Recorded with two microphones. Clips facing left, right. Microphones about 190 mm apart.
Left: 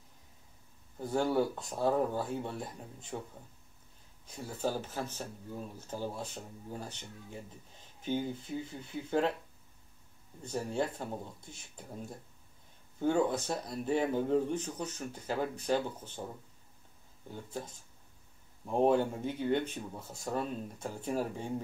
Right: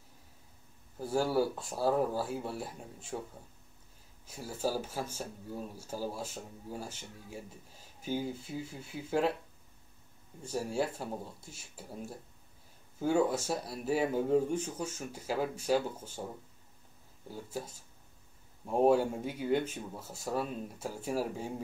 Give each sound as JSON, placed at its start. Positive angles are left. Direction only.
{"t": 0.9, "sound": "speech", "side_deg": -5}
{"t": 4.3, "sound": "speech", "side_deg": -5}
{"t": 10.4, "sound": "speech", "side_deg": -5}
{"t": 17.3, "sound": "speech", "side_deg": -5}